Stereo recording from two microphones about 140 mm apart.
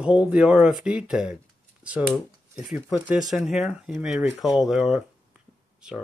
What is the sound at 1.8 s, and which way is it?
Computer keyboard, 10° right (ahead or behind).